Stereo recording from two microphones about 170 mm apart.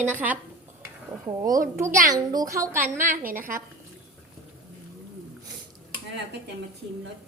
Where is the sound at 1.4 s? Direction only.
20° right (ahead or behind).